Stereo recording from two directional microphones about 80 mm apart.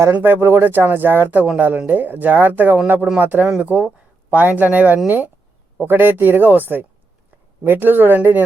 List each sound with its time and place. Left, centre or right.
0.1 s speech: right